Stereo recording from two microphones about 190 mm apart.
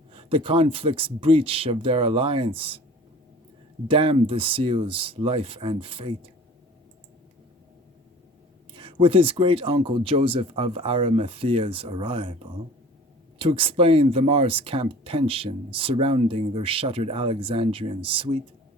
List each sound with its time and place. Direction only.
0.1 s speech: 30° right (ahead or behind)
3.8 s speech: 25° right (ahead or behind)
8.7 s speech: 25° right (ahead or behind)